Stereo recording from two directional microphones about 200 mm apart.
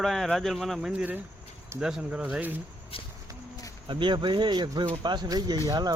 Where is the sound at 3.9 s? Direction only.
25° right (ahead or behind).